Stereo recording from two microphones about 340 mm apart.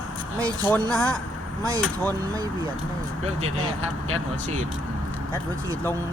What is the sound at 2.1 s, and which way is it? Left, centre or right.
Speech, centre.